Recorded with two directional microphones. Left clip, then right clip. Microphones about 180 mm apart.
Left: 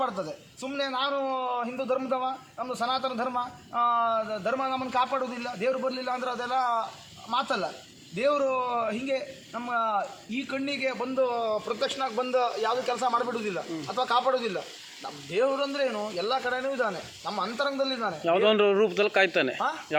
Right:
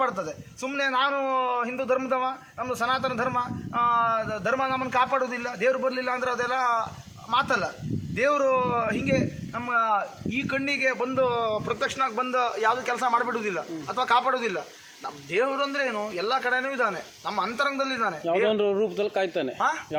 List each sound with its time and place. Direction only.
0.8 s a man's voice: 35° right (ahead or behind)
16.2 s speech: 15° right (ahead or behind)
16.6 s a man's voice: 40° right (ahead or behind)
18.3 s speech: 5° right (ahead or behind)